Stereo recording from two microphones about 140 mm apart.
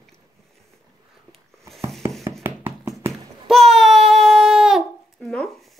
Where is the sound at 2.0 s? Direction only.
15° right (ahead or behind).